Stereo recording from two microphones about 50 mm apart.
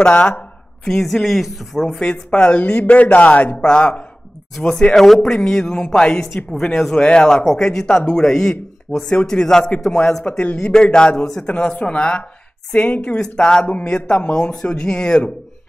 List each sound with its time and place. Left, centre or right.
0.0 s a woman's voice: left
0.8 s speech: centre
1.9 s a woman's voice: left
2.5 s a woman's voice: left; by 7.0 s centre
7.0 s a woman's voice: left
8.9 s speech: left
9.2 s speech: centre
10.4 s speech: left
10.7 s a woman's voice: centre